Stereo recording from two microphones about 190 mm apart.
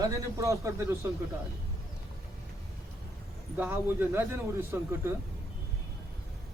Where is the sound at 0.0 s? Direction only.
15° right (ahead or behind).